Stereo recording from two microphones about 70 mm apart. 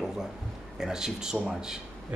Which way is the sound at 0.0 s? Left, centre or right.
Centre.